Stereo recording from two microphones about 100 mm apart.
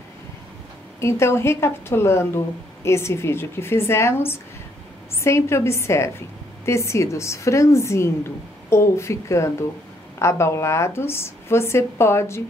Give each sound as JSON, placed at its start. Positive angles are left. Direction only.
{"t": 1.0, "sound": "a woman's voice", "side_deg": 25}